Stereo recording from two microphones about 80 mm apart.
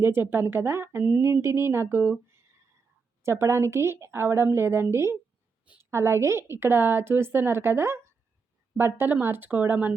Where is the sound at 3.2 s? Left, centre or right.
Right.